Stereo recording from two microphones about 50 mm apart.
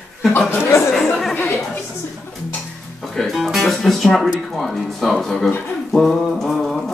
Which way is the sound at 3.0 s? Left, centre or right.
Centre.